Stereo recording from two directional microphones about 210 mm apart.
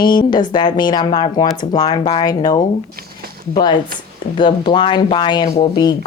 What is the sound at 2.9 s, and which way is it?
Speech, 45° right (ahead or behind).